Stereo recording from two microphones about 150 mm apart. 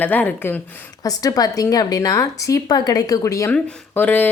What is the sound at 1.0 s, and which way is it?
A woman's voice, 25° left (ahead or behind).